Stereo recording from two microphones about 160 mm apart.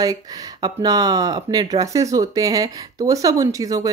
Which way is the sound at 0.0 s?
25° right (ahead or behind).